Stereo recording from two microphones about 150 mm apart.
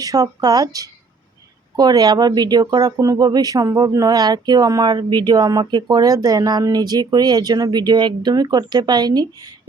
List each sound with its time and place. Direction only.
0.0 s speech: 25° right (ahead or behind)